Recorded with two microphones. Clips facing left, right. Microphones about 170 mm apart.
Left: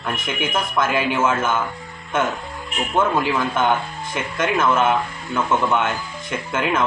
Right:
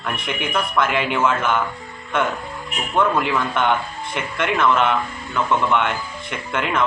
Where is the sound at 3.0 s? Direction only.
25° left (ahead or behind).